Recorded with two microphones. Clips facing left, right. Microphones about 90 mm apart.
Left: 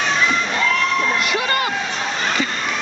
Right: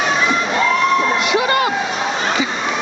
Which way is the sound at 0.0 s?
5° right (ahead or behind).